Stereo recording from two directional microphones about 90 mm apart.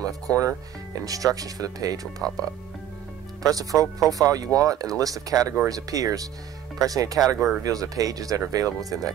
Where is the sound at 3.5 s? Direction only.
40° right (ahead or behind).